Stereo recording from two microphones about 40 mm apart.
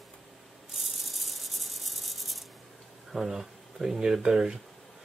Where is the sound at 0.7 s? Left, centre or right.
Centre.